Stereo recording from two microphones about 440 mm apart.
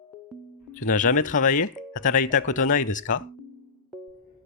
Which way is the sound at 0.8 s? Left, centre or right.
Centre.